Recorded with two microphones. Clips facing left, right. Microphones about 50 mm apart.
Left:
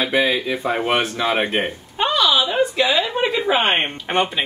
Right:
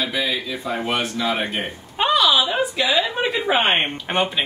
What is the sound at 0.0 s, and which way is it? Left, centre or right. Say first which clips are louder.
Speech: left 5 dB; left.